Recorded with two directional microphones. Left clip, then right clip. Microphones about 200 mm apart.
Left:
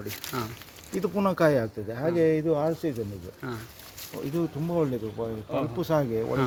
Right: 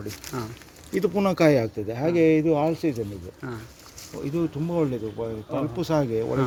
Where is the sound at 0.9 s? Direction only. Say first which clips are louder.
Right 3 dB; 40° right (ahead or behind).